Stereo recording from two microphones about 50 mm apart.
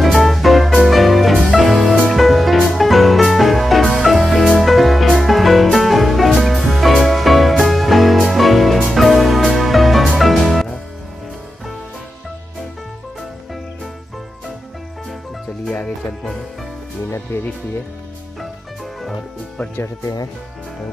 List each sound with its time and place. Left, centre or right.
0.0 s music: centre
17.1 s music: left